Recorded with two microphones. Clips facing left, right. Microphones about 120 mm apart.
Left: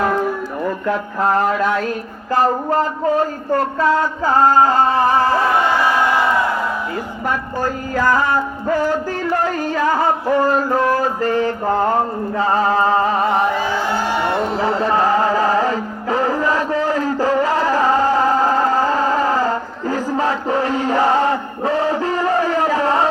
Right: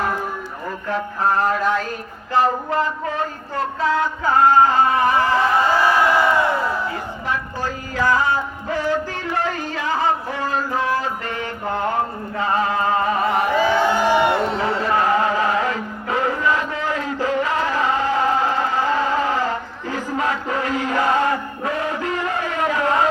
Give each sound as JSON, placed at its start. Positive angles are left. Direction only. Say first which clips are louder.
{"t": 2.3, "sound": "speech", "louder": "left 3 dB", "side_deg": 40}
{"t": 4.4, "sound": "speech", "louder": "left 1 dB", "side_deg": 35}
{"t": 7.3, "sound": "music", "louder": "left 5 dB", "side_deg": 45}
{"t": 9.2, "sound": "a sound", "louder": "left 5 dB", "side_deg": 40}
{"t": 12.4, "sound": "music", "louder": "left 4 dB", "side_deg": 35}
{"t": 14.5, "sound": "music", "louder": "left 3 dB", "side_deg": 30}